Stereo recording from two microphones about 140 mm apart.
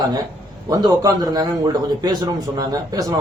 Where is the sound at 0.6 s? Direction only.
25° right (ahead or behind).